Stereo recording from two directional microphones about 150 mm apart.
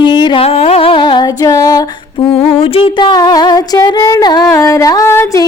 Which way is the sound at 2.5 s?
40° left (ahead or behind).